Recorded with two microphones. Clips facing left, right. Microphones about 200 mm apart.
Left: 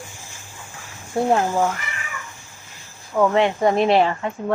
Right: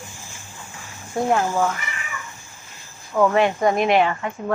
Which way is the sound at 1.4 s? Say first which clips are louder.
Left 1 dB; 15° left (ahead or behind).